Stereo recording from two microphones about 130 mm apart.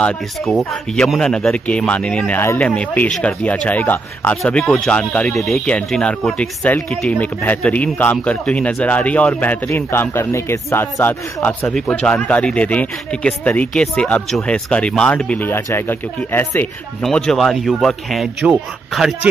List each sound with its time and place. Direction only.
0.0 s speech: 5° left (ahead or behind)
17.0 s speech: 5° left (ahead or behind)